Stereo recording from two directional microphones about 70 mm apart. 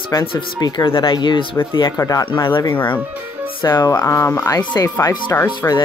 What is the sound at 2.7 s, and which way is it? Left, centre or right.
Speech, left.